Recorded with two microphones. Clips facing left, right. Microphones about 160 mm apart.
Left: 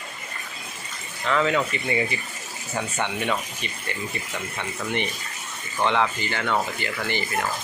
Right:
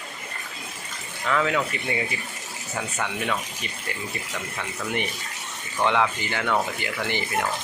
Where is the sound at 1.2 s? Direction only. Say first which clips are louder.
Left 1 dB; centre (ahead or behind).